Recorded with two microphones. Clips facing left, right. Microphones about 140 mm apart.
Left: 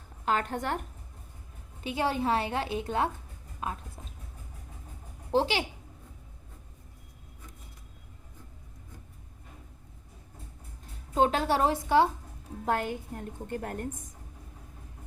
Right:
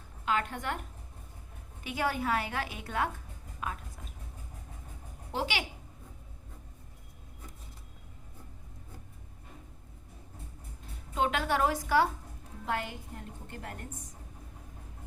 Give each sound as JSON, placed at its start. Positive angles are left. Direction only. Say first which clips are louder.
{"t": 0.3, "sound": "a woman's voice", "louder": "left 3 dB", "side_deg": 45}
{"t": 1.8, "sound": "a woman's voice", "louder": "left 3 dB", "side_deg": 25}
{"t": 5.3, "sound": "a woman's voice", "louder": "left 7 dB", "side_deg": 30}
{"t": 11.1, "sound": "a woman's voice", "louder": "left 4 dB", "side_deg": 35}
{"t": 12.6, "sound": "a woman's voice", "louder": "left 5 dB", "side_deg": 45}